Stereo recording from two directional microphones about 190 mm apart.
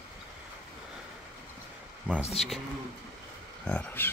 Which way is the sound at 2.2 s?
35° left (ahead or behind).